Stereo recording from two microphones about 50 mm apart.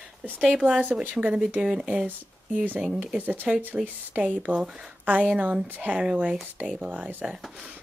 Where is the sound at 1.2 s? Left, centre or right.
Centre.